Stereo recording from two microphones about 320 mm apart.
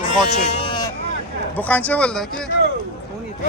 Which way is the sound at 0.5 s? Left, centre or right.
Centre.